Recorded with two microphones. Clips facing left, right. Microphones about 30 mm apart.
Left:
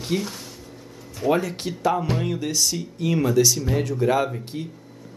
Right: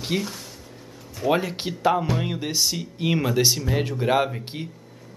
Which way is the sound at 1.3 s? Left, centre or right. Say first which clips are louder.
Left 1 dB; right.